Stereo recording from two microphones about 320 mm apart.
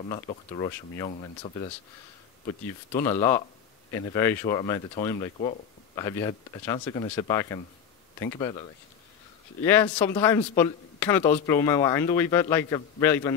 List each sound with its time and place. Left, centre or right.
0.1 s speech: centre